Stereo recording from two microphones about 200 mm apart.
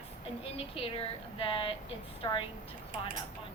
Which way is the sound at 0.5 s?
30° left (ahead or behind).